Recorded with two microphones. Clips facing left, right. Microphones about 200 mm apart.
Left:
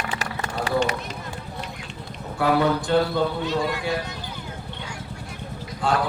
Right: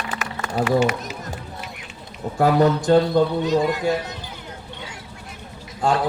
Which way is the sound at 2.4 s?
45° right (ahead or behind).